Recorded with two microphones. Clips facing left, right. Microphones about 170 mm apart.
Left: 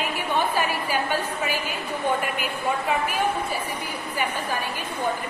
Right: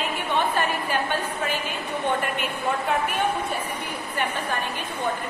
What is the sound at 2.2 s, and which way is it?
A woman's voice, 5° left (ahead or behind).